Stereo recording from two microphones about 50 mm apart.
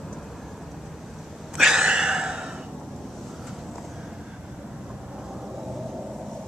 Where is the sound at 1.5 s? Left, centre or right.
Centre.